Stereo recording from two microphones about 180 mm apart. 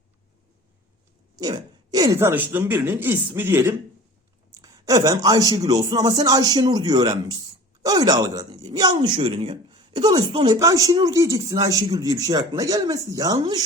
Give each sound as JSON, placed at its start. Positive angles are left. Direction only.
{"t": 1.4, "sound": "speech", "side_deg": -20}